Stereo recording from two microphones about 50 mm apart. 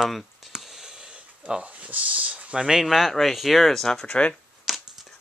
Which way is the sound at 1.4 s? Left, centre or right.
Right.